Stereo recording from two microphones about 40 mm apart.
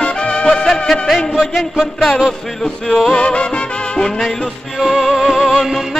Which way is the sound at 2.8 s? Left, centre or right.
Centre.